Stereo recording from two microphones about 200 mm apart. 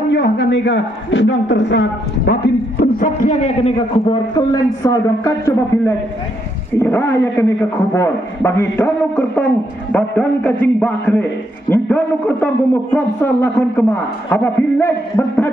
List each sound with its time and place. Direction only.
0.1 s a man's voice: 65° left (ahead or behind); by 4.2 s 30° left (ahead or behind)
4.4 s a man's voice: 15° left (ahead or behind)